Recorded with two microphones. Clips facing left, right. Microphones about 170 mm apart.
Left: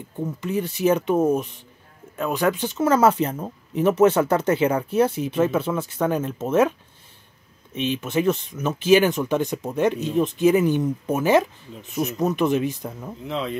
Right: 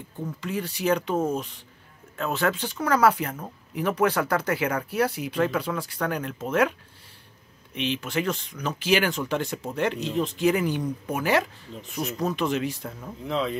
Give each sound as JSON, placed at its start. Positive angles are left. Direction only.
{"t": 0.4, "sound": "speech", "side_deg": 20}
{"t": 8.0, "sound": "speech", "side_deg": 20}
{"t": 13.3, "sound": "speech", "side_deg": 0}